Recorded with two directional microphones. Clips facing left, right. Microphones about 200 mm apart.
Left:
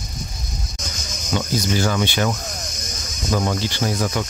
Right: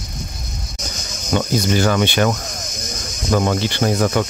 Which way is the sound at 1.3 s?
60° right (ahead or behind).